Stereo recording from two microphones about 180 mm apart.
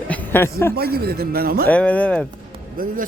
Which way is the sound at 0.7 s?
60° right (ahead or behind).